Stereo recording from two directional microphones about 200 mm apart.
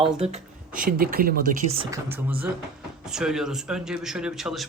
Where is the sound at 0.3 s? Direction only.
40° right (ahead or behind).